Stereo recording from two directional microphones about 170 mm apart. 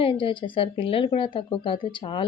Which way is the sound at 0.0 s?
30° left (ahead or behind).